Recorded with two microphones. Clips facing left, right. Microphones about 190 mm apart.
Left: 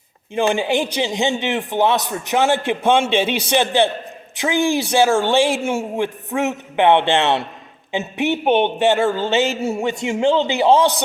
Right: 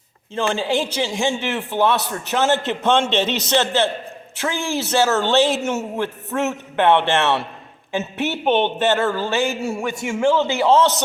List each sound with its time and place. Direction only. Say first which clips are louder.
0.3 s a man's voice: left 3 dB; 15° left (ahead or behind)